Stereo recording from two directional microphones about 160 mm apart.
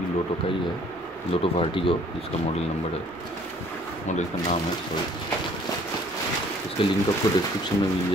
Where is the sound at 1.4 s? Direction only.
35° left (ahead or behind).